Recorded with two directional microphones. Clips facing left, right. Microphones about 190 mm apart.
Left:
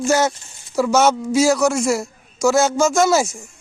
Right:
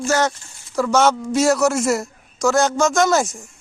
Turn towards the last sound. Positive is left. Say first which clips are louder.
# left 1 dB
turn(degrees=0)  # may be behind; listen again after turning